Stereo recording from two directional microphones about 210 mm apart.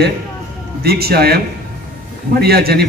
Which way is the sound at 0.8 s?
50° right (ahead or behind).